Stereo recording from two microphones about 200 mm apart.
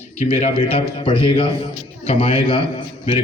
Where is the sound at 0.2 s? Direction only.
35° left (ahead or behind).